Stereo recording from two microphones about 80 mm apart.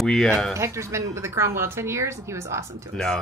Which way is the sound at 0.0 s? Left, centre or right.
Centre.